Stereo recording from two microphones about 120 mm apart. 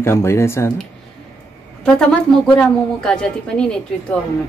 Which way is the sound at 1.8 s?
5° left (ahead or behind).